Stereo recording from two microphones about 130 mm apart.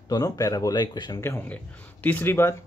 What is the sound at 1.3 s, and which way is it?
Speech, 15° left (ahead or behind).